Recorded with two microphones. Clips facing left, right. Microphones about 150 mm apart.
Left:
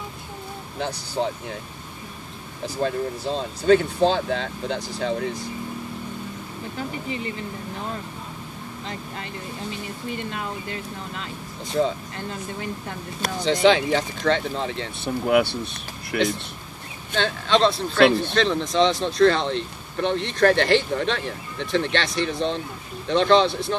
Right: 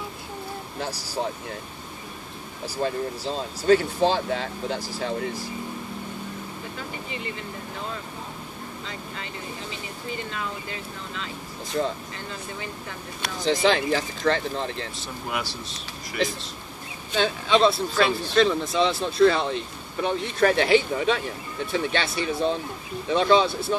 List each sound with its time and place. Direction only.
0.7 s speech: centre (ahead or behind)
2.6 s speech: centre (ahead or behind)
8.8 s speech: 45° left (ahead or behind)
11.7 s speech: centre (ahead or behind)
13.4 s speech: centre (ahead or behind)
15.0 s speech: 60° left (ahead or behind)
17.1 s speech: 5° right (ahead or behind)